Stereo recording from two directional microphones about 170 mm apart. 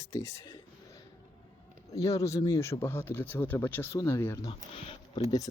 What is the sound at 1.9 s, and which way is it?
Speech, 20° left (ahead or behind).